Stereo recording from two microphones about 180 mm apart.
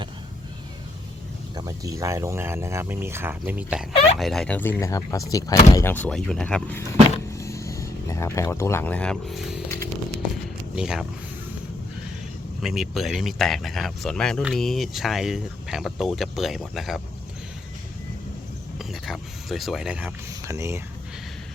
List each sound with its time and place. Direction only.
1.5 s speech: 20° right (ahead or behind); by 6.8 s 10° left (ahead or behind)
7.3 s a sound: 15° left (ahead or behind); by 9.6 s centre (ahead or behind)
10.8 s speech: 5° right (ahead or behind)
12.6 s speech: centre (ahead or behind)
18.8 s speech: centre (ahead or behind)